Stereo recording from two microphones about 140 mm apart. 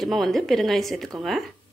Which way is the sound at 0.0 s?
Centre (ahead or behind).